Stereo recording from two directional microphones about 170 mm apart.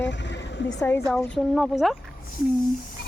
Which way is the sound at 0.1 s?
90° left.